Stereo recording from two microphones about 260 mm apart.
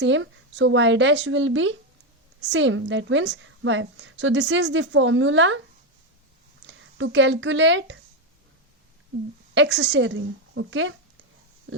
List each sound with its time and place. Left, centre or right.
0.0 s a woman's voice: right
6.7 s speech: right
9.6 s a woman's voice: right